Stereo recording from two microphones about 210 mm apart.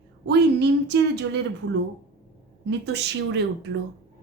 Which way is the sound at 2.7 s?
55° right (ahead or behind).